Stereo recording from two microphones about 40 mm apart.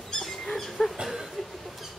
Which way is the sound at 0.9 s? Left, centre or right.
Centre.